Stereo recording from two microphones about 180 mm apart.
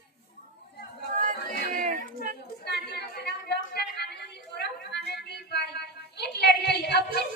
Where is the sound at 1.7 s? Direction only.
45° right (ahead or behind).